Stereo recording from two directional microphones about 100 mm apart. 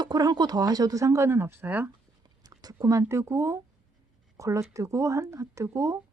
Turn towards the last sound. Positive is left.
turn(degrees=-30)  # may be behind; listen again after turning